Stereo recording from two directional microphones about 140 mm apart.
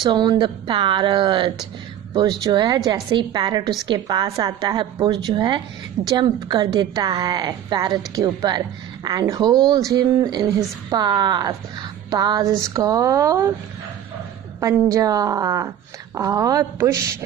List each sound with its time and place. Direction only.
0.0 s a woman's voice: 30° right (ahead or behind)
14.6 s a woman's voice: 25° right (ahead or behind)